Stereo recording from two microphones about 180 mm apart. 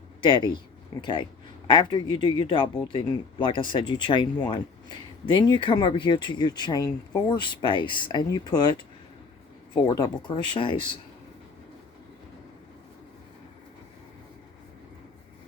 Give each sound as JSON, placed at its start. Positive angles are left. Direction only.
{"t": 0.2, "sound": "speech", "side_deg": 25}
{"t": 9.7, "sound": "speech", "side_deg": 20}